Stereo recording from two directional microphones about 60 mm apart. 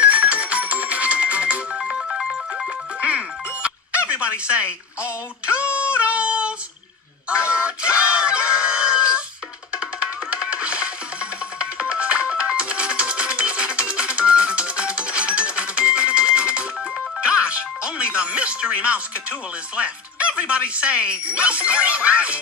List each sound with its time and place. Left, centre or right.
0.0 s ringtone: right
2.0 s music: centre
3.0 s music: right
7.2 s a sound: centre
9.7 s music: centre